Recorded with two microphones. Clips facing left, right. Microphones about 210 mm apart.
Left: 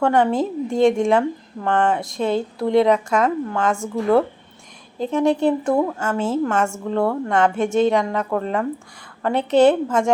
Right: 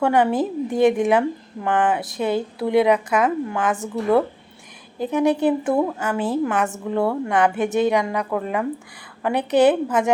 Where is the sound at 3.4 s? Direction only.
15° right (ahead or behind).